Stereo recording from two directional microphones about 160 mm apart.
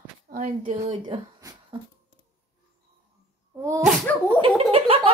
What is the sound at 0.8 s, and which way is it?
Speech, 35° right (ahead or behind).